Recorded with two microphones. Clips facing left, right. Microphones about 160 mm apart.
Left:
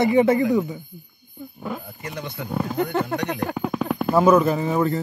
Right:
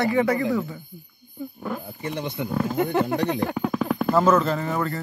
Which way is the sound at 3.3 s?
Centre (ahead or behind).